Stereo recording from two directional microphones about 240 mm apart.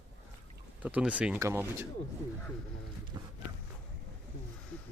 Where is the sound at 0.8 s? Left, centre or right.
Centre.